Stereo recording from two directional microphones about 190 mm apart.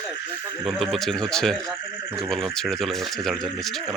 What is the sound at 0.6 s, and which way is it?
Speech, centre (ahead or behind).